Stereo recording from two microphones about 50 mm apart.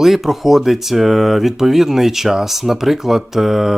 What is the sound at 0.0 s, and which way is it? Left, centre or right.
Speech, centre.